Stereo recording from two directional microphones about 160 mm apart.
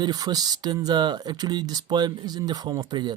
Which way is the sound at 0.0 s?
25° right (ahead or behind).